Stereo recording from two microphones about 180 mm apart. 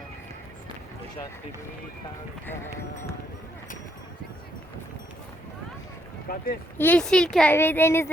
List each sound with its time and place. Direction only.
6.2 s speech: 55° left (ahead or behind)
6.7 s speech: 10° left (ahead or behind)